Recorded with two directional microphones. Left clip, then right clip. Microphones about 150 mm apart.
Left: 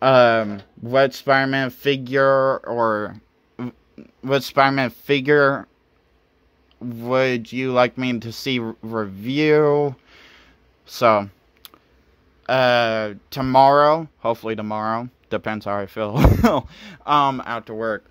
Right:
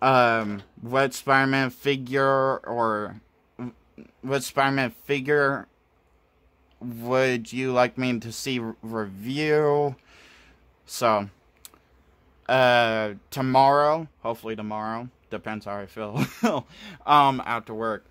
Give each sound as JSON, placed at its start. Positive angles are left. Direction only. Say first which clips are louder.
{"t": 0.0, "sound": "a sound", "louder": "left 5 dB", "side_deg": 10}
{"t": 0.8, "sound": "speech", "louder": "left 6 dB", "side_deg": 5}
{"t": 6.8, "sound": "speech", "louder": "left 4 dB", "side_deg": 10}
{"t": 11.6, "sound": "clicking", "louder": "left 6 dB", "side_deg": 15}
{"t": 12.4, "sound": "speech", "louder": "left 2 dB", "side_deg": 5}
{"t": 13.6, "sound": "speech", "louder": "left 5 dB", "side_deg": 20}
{"t": 16.7, "sound": "speech", "louder": "even", "side_deg": 10}